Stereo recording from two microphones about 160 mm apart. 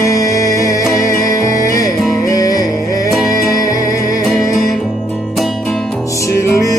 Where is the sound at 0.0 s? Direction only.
20° left (ahead or behind).